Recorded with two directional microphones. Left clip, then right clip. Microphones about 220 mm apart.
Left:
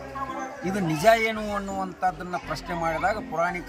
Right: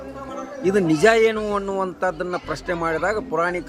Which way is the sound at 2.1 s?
35° right (ahead or behind).